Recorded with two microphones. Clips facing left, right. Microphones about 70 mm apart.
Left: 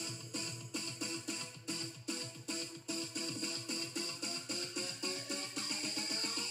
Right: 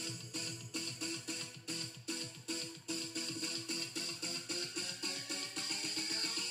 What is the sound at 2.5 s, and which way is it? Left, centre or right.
Music, left.